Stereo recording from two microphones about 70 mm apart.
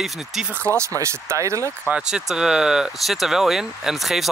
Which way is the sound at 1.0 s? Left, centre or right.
Right.